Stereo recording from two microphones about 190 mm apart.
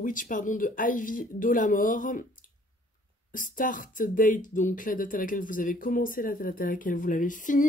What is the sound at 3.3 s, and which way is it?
Speech, 45° left (ahead or behind).